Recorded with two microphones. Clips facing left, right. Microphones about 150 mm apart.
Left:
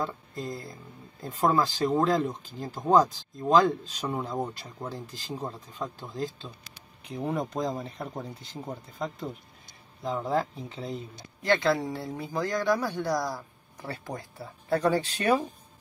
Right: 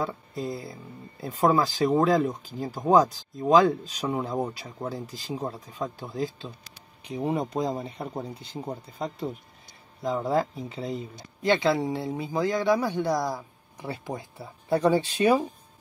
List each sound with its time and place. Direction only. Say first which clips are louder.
0.0 s speech: right 3 dB; centre (ahead or behind)
10.0 s speech: right 3 dB; 10° right (ahead or behind)
11.7 s speech: right 3 dB; 20° right (ahead or behind)
12.1 s speech: right 4 dB; 10° right (ahead or behind)
12.8 s speech: right 3 dB; 20° right (ahead or behind)
13.4 s speech: right 2 dB; 10° right (ahead or behind)